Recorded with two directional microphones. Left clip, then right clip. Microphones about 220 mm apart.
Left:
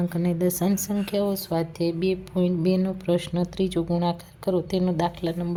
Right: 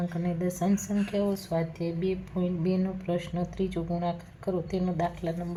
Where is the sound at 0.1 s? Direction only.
35° left (ahead or behind).